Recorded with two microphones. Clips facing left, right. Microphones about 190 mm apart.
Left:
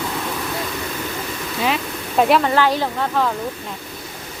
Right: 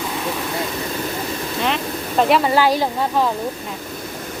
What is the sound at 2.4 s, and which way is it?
Speech, 10° right (ahead or behind).